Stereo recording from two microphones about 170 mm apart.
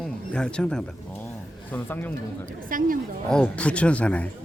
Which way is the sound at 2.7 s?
55° right (ahead or behind).